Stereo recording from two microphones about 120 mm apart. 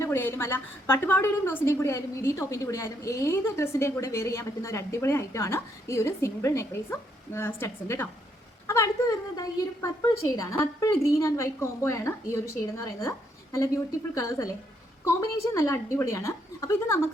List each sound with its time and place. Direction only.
0.0 s a woman's voice: 20° left (ahead or behind)